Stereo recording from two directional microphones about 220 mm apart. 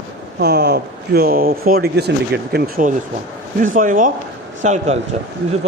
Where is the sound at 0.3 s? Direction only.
50° right (ahead or behind).